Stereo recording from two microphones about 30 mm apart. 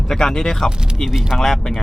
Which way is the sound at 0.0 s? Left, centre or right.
Centre.